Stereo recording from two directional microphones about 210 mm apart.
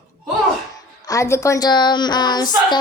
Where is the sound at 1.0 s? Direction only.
15° left (ahead or behind).